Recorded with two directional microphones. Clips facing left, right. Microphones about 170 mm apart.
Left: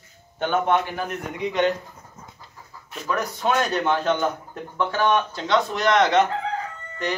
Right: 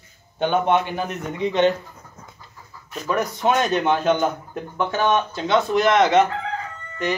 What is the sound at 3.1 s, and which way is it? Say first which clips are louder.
A man's voice: right 3 dB; 20° right (ahead or behind).